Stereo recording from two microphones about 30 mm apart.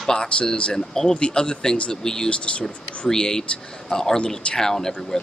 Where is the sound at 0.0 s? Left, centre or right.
Centre.